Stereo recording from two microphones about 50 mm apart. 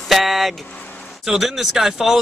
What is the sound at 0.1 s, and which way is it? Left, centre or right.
Vehicle, centre.